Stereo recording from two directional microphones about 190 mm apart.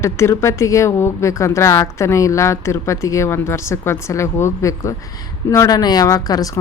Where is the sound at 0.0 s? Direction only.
15° left (ahead or behind).